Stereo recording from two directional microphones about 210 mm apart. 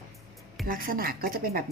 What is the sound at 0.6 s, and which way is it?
Speech, 40° right (ahead or behind).